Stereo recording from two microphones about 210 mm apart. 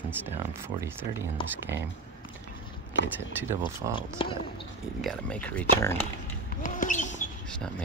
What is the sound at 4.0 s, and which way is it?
Speech, 25° left (ahead or behind).